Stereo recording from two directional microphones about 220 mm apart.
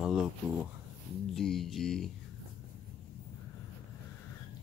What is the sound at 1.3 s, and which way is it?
Speech, centre (ahead or behind).